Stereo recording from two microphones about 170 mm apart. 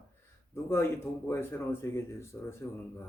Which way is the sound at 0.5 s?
15° left (ahead or behind).